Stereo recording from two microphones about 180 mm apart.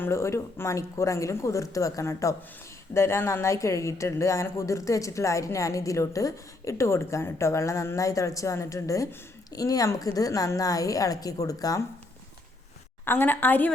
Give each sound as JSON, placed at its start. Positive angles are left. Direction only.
{"t": 0.0, "sound": "a woman's voice", "side_deg": 15}
{"t": 13.1, "sound": "speech", "side_deg": 10}